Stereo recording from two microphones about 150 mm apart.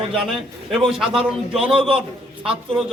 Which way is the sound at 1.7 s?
35° right (ahead or behind).